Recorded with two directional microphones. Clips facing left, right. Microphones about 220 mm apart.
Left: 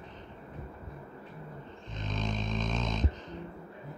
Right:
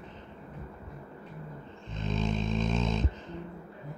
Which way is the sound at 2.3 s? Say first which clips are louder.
Right 4 dB; 25° right (ahead or behind).